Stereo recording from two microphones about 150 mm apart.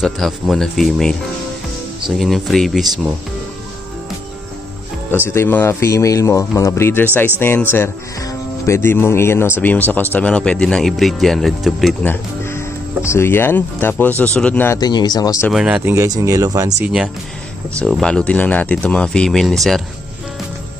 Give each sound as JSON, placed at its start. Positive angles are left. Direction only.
{"t": 0.0, "sound": "speech", "side_deg": 0}
{"t": 5.3, "sound": "speech", "side_deg": 15}
{"t": 12.1, "sound": "speech", "side_deg": 15}
{"t": 14.8, "sound": "speech", "side_deg": 25}
{"t": 15.5, "sound": "speech", "side_deg": -5}
{"t": 15.9, "sound": "speech", "side_deg": -20}
{"t": 16.8, "sound": "speech", "side_deg": -5}